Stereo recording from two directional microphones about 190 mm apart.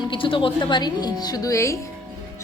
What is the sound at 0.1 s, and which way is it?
A woman's voice, 25° left (ahead or behind).